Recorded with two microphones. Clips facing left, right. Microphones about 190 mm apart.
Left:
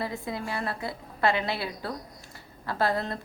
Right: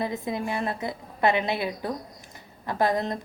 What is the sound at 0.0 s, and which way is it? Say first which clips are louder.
A woman's voice: right 4 dB; 20° right (ahead or behind).